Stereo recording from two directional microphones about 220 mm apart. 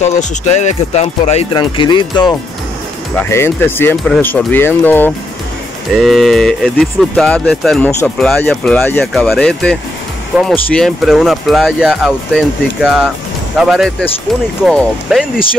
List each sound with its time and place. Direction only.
0.0 s speech: 35° left (ahead or behind); by 15.2 s 5° right (ahead or behind)